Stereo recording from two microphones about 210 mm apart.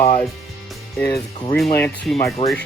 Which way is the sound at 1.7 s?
5° left (ahead or behind).